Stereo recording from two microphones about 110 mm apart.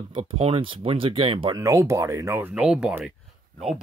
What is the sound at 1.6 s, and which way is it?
Speech, 30° right (ahead or behind).